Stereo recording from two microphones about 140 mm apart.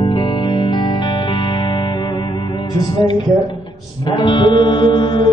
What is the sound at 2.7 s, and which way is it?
Music, 30° left (ahead or behind).